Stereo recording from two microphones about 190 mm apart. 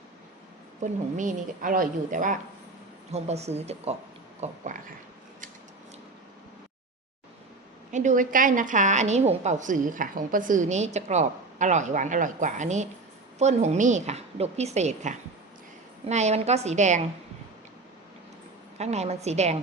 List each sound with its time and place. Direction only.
0.8 s a woman's voice: 40° right (ahead or behind)
7.9 s a woman's voice: 40° right (ahead or behind)
18.8 s a woman's voice: 35° right (ahead or behind)